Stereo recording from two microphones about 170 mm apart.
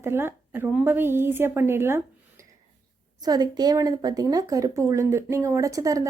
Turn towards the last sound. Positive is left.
turn(degrees=-20)  # may be behind; listen again after turning